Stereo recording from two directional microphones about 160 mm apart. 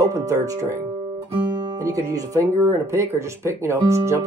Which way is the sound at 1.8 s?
20° right (ahead or behind).